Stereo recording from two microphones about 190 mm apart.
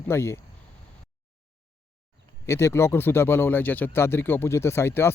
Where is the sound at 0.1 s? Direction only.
15° left (ahead or behind).